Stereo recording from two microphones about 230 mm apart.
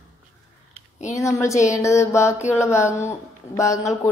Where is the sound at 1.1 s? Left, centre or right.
Centre.